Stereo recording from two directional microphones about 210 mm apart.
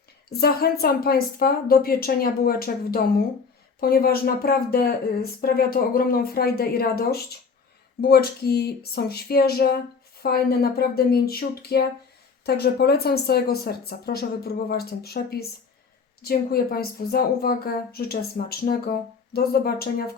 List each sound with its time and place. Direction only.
0.3 s a woman's voice: 50° left (ahead or behind)